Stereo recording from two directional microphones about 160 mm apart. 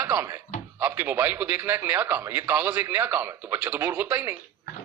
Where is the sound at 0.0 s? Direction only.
15° right (ahead or behind).